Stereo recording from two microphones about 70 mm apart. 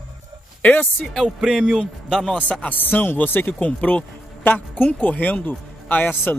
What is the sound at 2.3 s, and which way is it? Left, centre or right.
A man's voice, centre.